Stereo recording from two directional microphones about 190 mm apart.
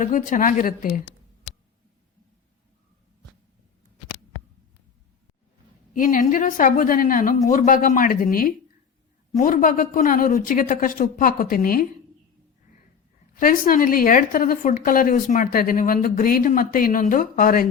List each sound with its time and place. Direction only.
0.0 s a woman's voice: 40° left (ahead or behind)
5.9 s a woman's voice: 45° left (ahead or behind)
13.3 s a woman's voice: 45° left (ahead or behind)